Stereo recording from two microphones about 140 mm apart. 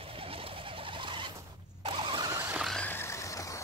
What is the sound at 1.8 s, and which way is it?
Vehicle, 35° right (ahead or behind).